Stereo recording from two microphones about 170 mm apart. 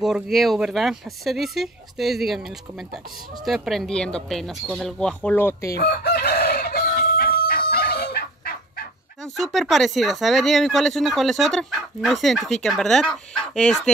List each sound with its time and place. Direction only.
0.0 s speech: centre (ahead or behind); by 5.8 s 15° left (ahead or behind)
5.8 s chicken: 70° left (ahead or behind)
9.2 s speech: centre (ahead or behind)